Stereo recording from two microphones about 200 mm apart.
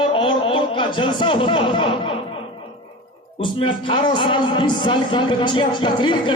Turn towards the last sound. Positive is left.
turn(degrees=25)  # may be behind; listen again after turning